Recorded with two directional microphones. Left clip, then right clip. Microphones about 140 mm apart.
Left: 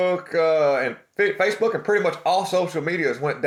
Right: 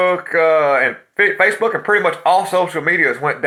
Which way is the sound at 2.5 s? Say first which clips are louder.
Right 6 dB; 45° left (ahead or behind).